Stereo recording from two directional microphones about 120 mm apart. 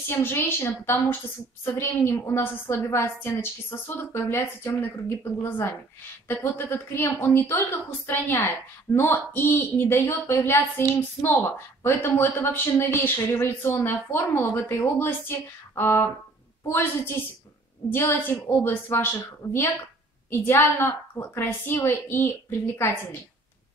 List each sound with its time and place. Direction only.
0.1 s a woman's voice: 20° left (ahead or behind)